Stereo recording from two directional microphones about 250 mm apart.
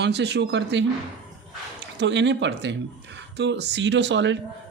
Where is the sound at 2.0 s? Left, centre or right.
Right.